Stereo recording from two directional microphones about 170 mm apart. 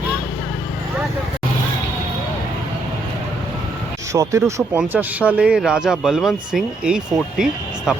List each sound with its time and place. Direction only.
4.1 s speech: 20° right (ahead or behind); by 8.0 s 5° right (ahead or behind)